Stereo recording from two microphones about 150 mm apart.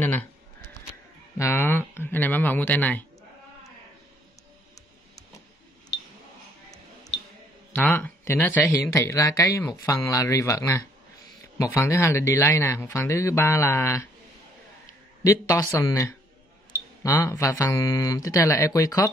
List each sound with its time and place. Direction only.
1.4 s a sound: 15° left (ahead or behind)
7.7 s speech: 10° left (ahead or behind)
15.2 s speech: 20° left (ahead or behind)